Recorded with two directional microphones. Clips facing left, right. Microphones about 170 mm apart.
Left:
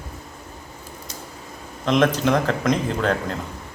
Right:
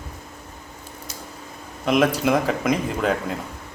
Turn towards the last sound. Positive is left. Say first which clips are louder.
# even
turn(degrees=-5)  # may be behind; listen again after turning